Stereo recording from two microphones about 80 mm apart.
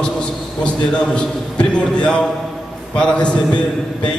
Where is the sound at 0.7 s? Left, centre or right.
Centre.